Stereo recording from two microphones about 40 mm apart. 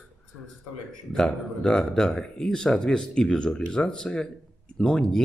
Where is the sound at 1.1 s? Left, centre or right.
Centre.